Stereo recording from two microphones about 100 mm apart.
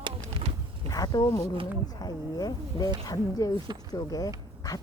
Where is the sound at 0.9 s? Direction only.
40° left (ahead or behind).